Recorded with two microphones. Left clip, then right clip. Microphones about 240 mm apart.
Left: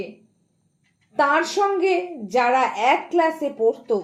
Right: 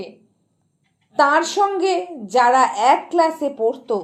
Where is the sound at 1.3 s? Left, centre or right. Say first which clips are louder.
Right 2 dB; centre.